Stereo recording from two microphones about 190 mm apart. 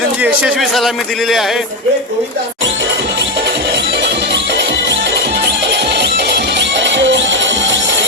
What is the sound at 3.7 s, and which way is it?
Music, 60° right (ahead or behind).